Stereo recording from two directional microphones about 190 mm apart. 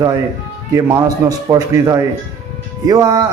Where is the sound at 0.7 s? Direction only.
15° right (ahead or behind).